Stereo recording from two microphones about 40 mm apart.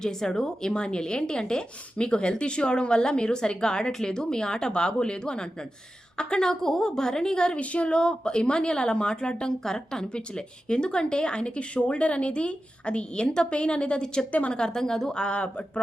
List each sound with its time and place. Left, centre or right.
0.0 s a woman's voice: centre
7.6 s a woman's voice: left